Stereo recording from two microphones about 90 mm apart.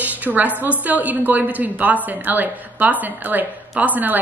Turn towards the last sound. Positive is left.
turn(degrees=-20)  # may be behind; listen again after turning